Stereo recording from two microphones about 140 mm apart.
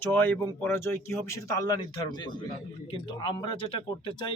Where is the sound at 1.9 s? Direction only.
30° left (ahead or behind).